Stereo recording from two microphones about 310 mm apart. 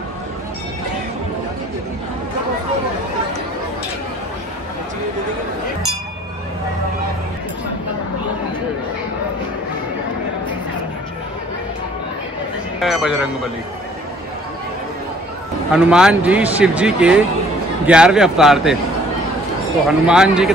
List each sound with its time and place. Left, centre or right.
12.8 s speech: centre
15.7 s speech: centre
19.9 s speech: centre